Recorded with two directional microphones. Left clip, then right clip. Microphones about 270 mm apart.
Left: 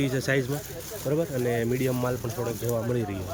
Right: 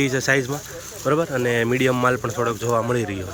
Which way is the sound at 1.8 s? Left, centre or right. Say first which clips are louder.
Right 9 dB; right.